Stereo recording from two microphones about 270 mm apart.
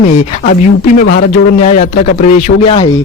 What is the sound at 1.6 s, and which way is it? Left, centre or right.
Speech, left.